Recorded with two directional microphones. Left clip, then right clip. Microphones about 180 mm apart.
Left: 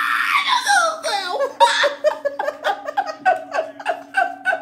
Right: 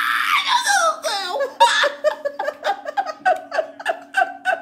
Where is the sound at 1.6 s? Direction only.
20° right (ahead or behind).